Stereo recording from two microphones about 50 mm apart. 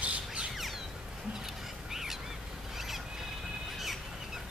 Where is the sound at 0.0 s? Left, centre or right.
Right.